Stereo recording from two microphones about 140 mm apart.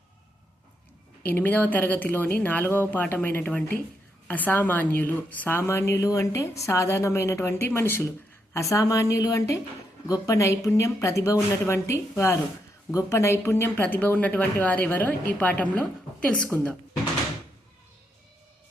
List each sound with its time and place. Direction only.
1.2 s a woman's voice: 10° left (ahead or behind)